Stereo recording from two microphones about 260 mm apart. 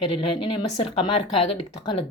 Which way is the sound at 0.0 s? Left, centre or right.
Centre.